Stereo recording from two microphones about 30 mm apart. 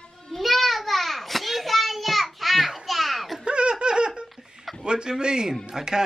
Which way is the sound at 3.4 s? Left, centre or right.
Right.